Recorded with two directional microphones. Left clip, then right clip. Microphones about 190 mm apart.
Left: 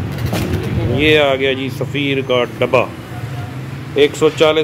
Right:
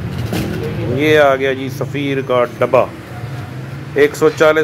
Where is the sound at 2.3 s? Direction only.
5° left (ahead or behind).